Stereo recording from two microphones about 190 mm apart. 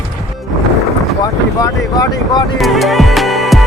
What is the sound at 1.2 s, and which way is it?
Speech, 20° left (ahead or behind).